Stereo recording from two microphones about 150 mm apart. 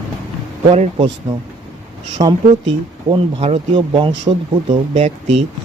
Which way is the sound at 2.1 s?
30° right (ahead or behind).